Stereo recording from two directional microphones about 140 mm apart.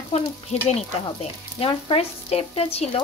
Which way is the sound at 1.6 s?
45° left (ahead or behind).